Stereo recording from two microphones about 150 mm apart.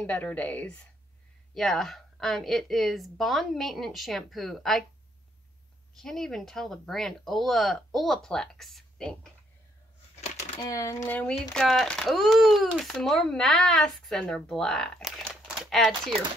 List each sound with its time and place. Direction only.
0.0 s a woman's voice: 10° left (ahead or behind)
5.9 s speech: 5° left (ahead or behind)
10.6 s speech: 20° left (ahead or behind)
11.1 s speech: 10° left (ahead or behind)